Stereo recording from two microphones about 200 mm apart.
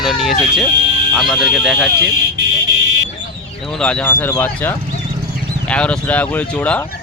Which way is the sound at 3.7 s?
5° left (ahead or behind).